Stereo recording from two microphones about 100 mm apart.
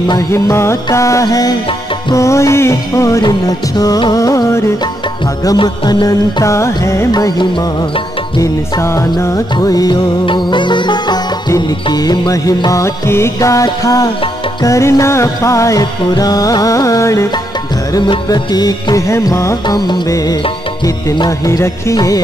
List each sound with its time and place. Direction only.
0.3 s music: 30° left (ahead or behind)
5.6 s music: 55° left (ahead or behind)
6.0 s music: 30° left (ahead or behind)
7.1 s music: 40° left (ahead or behind)
10.2 s music: 50° left (ahead or behind); by 17.3 s 30° left (ahead or behind)
18.3 s music: 40° left (ahead or behind)